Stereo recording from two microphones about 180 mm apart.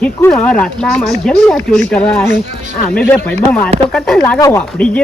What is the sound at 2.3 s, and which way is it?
Speech, 45° right (ahead or behind).